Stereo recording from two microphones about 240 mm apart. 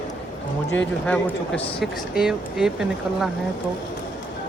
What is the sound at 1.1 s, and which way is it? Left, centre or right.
Speech, centre.